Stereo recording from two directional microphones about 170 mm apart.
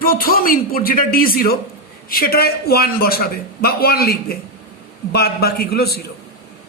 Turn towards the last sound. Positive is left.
turn(degrees=70)  # may be behind; listen again after turning